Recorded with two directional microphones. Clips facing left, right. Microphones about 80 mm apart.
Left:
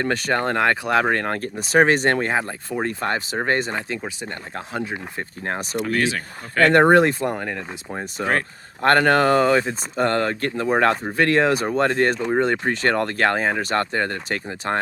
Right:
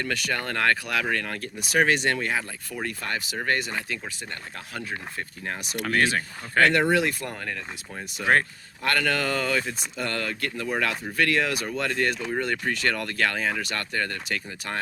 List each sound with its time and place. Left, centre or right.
0.0 s speech: left
0.9 s speech: left
5.5 s speech: left
5.9 s speech: right
6.6 s speech: left
7.1 s speech: left
8.2 s speech: left